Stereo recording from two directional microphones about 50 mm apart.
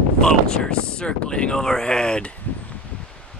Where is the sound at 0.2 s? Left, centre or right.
Centre.